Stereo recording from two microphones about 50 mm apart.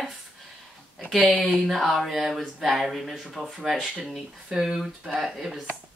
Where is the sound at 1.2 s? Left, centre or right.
Right.